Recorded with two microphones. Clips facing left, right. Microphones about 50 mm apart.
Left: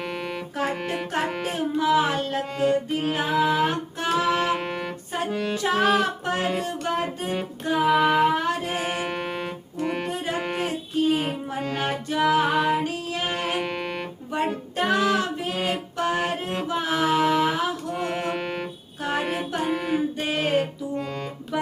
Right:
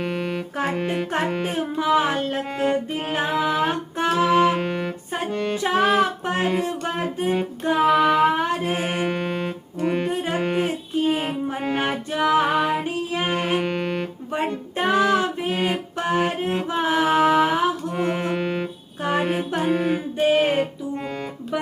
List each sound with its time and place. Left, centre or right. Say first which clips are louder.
0.0 s music: right 4 dB; centre
1.4 s music: right 1 dB; centre
3.0 s music: right 1 dB; right
3.2 s a sound: left 1 dB; centre
3.7 s music: right 3 dB; centre
4.5 s music: right 3 dB; centre
5.5 s music: right 2 dB; centre
7.8 s female singing: right 2 dB; centre
8.4 s music: right 3 dB; centre
11.0 s music: even; right; by 14.1 s centre
14.3 s music: even; centre
18.1 s music: right 3 dB; centre